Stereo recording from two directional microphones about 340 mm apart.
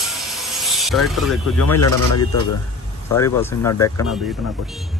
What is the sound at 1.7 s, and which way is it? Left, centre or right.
Speech, left.